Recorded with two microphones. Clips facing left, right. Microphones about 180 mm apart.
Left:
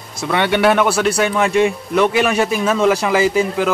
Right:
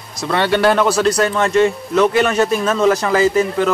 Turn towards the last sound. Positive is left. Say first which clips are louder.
# right 1 dB
turn(degrees=10)  # may be behind; listen again after turning